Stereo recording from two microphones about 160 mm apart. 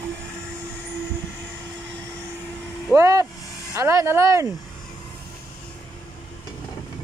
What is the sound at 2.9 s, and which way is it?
Speech, 20° right (ahead or behind).